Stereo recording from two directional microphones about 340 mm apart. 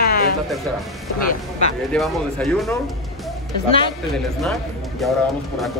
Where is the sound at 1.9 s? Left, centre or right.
Centre.